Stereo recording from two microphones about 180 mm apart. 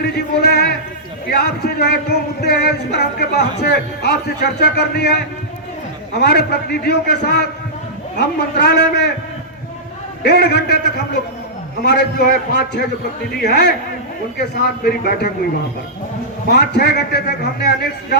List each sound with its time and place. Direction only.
0.0 s music: 65° left (ahead or behind)
8.1 s a man's voice: 65° left (ahead or behind)
10.2 s music: 65° left (ahead or behind)
13.3 s music: 65° left (ahead or behind)
16.5 s music: 65° left (ahead or behind)